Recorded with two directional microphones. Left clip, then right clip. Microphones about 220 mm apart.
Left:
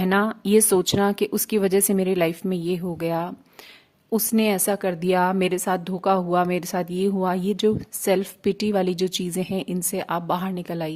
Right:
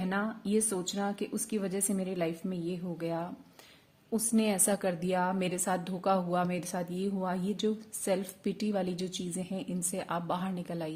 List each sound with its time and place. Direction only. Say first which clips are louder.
0.0 s a woman's voice: left 12 dB; 40° left (ahead or behind)